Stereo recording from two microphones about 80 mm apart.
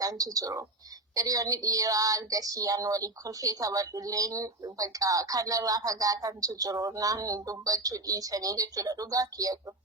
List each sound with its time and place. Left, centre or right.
0.0 s a woman's voice: right